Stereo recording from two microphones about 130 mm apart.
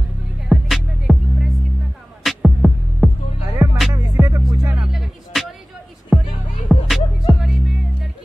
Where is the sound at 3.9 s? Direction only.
30° right (ahead or behind).